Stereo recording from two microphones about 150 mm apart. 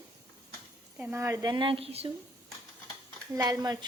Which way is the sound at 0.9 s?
10° right (ahead or behind).